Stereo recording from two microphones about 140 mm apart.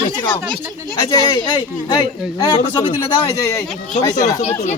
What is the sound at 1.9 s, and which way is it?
Speech, 30° left (ahead or behind).